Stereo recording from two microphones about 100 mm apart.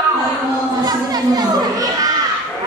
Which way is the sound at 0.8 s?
40° right (ahead or behind).